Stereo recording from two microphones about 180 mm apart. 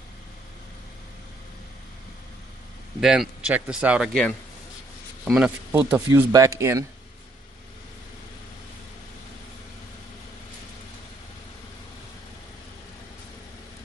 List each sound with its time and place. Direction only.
3.0 s a man's voice: 5° right (ahead or behind)